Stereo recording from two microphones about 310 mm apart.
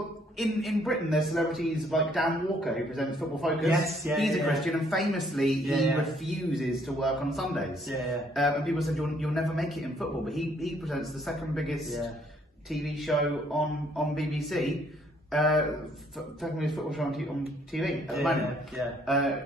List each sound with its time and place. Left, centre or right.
0.4 s a man's voice: centre